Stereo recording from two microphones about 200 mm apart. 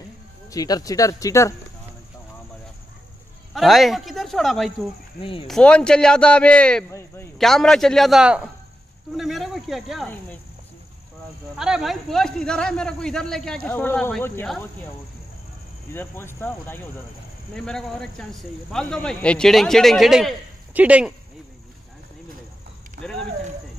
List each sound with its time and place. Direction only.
0.5 s speech: 20° left (ahead or behind)
3.5 s a man's voice: centre (ahead or behind)
5.2 s speech: 25° left (ahead or behind)
5.5 s a man's voice: 5° left (ahead or behind)
7.3 s a man's voice: centre (ahead or behind)
11.5 s a man's voice: 5° right (ahead or behind)
15.9 s a man's voice: 10° left (ahead or behind); by 21.1 s 5° right (ahead or behind)